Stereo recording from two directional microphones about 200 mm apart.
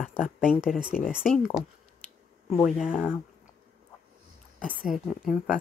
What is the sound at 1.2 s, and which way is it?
A woman's voice, 10° left (ahead or behind).